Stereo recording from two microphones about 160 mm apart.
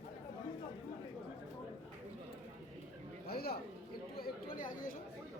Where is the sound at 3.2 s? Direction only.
75° left (ahead or behind).